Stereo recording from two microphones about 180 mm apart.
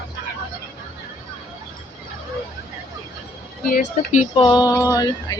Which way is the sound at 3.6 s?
45° left (ahead or behind).